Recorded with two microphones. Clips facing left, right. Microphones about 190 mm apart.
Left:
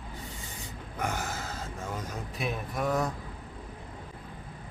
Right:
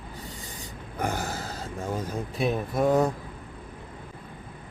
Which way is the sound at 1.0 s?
35° right (ahead or behind).